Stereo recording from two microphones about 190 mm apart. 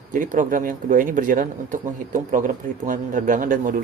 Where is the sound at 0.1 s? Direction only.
45° right (ahead or behind).